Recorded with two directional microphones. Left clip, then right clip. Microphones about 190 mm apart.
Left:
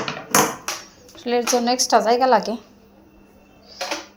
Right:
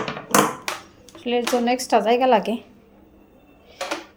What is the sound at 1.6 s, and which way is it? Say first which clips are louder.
A woman's voice: left 2 dB; 20° right (ahead or behind).